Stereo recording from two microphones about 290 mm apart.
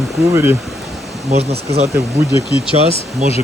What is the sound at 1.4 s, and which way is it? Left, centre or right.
Speech, right.